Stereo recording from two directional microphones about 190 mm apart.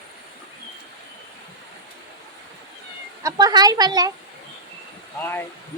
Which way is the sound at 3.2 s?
20° right (ahead or behind).